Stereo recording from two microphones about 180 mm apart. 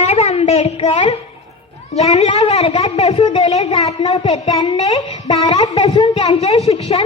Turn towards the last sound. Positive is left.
turn(degrees=35)  # may be behind; listen again after turning